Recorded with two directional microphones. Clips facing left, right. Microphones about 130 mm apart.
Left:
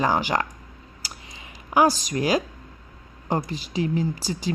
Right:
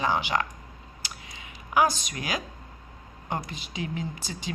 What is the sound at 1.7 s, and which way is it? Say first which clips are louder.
Speech: left 4 dB; 35° left (ahead or behind).